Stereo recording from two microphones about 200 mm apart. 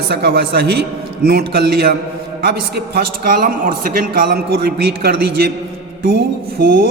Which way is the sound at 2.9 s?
50° right (ahead or behind).